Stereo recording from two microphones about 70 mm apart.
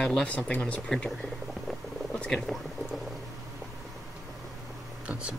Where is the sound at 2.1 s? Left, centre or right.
Centre.